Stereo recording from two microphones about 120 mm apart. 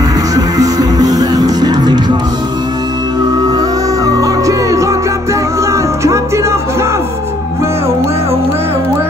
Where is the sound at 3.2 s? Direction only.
35° right (ahead or behind).